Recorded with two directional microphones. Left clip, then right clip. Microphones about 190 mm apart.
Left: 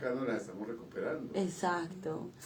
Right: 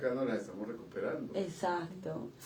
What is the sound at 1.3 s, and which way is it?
Speech, 40° left (ahead or behind).